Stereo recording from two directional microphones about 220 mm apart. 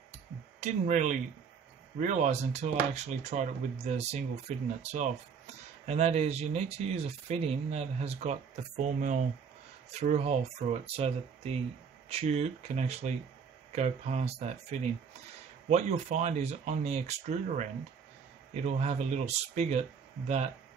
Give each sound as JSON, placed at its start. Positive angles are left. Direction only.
{"t": 0.6, "sound": "speech", "side_deg": -35}